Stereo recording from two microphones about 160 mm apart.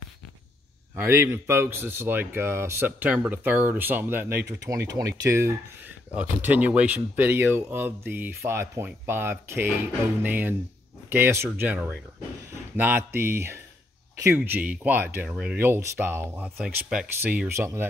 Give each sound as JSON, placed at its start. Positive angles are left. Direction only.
{"t": 0.9, "sound": "speech", "side_deg": -15}
{"t": 15.6, "sound": "speech", "side_deg": -15}